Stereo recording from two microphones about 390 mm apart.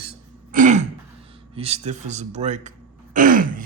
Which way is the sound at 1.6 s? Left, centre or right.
Centre.